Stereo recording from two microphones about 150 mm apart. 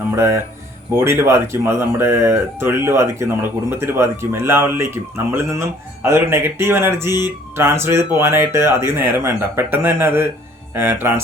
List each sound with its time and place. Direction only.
0.2 s speech: 15° right (ahead or behind)